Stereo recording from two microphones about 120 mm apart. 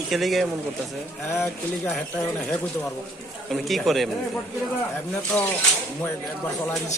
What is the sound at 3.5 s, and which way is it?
Speech, centre (ahead or behind).